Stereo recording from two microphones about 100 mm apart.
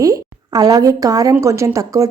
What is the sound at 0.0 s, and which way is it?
A woman's voice, 35° right (ahead or behind).